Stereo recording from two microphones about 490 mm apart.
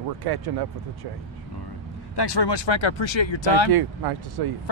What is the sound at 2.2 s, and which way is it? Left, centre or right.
Speech, left.